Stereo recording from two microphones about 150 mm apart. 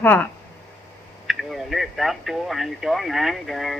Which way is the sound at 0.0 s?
10° left (ahead or behind).